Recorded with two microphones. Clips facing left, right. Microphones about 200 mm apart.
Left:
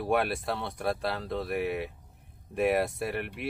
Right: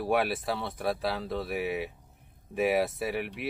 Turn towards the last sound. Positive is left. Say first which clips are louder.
# right 1 dB
turn(degrees=0)  # may be behind; listen again after turning